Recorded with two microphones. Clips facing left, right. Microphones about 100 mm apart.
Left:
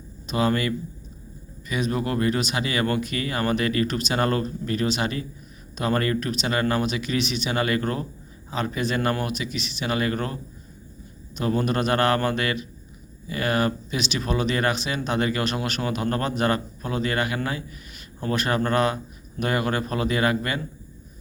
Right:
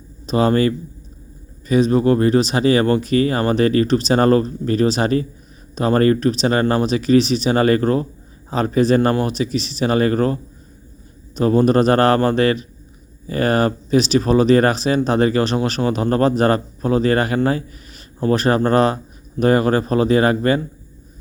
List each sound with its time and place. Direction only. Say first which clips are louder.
0.3 s speech: right 7 dB; 35° right (ahead or behind)